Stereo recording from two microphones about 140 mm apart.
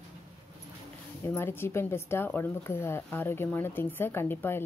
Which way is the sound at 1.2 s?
15° left (ahead or behind).